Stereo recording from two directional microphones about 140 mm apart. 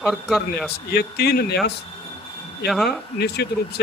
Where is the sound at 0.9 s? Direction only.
90° left.